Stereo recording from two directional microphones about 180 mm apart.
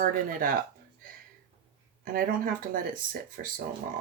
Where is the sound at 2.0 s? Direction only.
55° right (ahead or behind).